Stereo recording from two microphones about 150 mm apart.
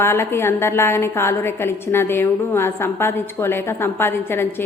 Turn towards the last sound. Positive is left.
turn(degrees=15)  # may be behind; listen again after turning